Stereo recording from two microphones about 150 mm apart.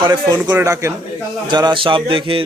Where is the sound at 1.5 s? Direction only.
30° right (ahead or behind).